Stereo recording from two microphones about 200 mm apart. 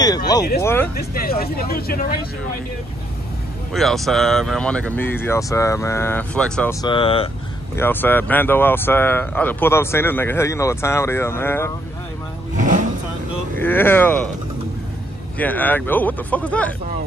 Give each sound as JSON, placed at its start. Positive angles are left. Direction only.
{"t": 0.0, "sound": "speech", "side_deg": 20}
{"t": 0.9, "sound": "speech", "side_deg": 50}
{"t": 3.7, "sound": "speech", "side_deg": 0}
{"t": 6.7, "sound": "speech", "side_deg": 20}
{"t": 7.7, "sound": "speech", "side_deg": 10}
{"t": 12.5, "sound": "vehicle", "side_deg": -40}
{"t": 13.6, "sound": "speech", "side_deg": 10}
{"t": 15.3, "sound": "speech", "side_deg": 10}